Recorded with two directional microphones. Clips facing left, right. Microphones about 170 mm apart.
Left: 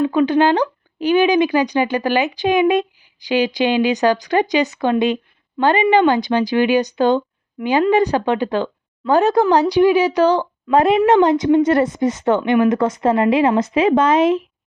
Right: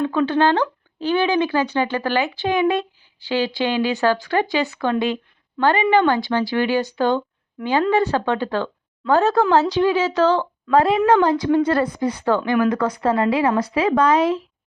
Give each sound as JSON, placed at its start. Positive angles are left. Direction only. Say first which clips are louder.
{"t": 0.0, "sound": "speech", "louder": "left 3 dB", "side_deg": 10}